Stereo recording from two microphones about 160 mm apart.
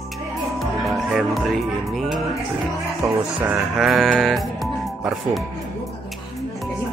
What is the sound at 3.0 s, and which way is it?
Speech, 20° right (ahead or behind).